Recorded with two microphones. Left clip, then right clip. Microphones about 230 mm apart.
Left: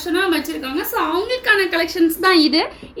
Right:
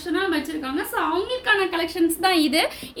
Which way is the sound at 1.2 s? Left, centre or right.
Centre.